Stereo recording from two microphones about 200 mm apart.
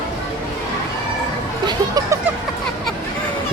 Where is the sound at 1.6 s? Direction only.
20° right (ahead or behind).